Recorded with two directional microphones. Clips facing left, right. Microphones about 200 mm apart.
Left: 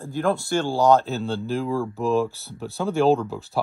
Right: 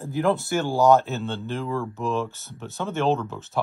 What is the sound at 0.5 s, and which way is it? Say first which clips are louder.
Speech: even; centre (ahead or behind).